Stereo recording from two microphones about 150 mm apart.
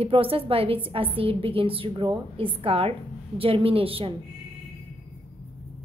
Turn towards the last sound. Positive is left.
turn(degrees=-40)  # may be behind; listen again after turning